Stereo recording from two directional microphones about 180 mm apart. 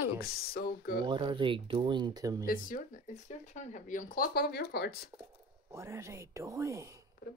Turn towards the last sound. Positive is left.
turn(degrees=-15)  # may be behind; listen again after turning